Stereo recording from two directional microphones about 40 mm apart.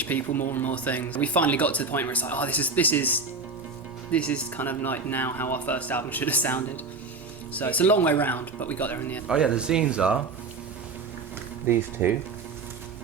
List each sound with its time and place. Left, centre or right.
0.0 s speech: left
0.7 s speech: left
4.1 s speech: left
4.5 s speech: left
9.2 s speech: centre
11.7 s speech: right